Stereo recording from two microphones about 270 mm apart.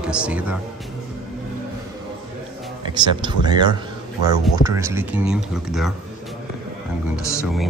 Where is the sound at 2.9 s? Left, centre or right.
Centre.